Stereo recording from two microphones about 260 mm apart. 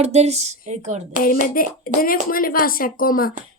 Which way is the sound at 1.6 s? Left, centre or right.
Left.